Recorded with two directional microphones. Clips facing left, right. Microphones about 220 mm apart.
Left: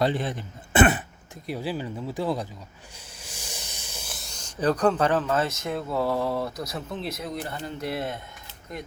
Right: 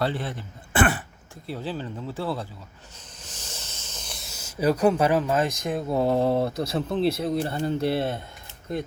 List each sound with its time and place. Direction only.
0.0 s a man's voice: 20° left (ahead or behind); by 8.8 s 30° right (ahead or behind)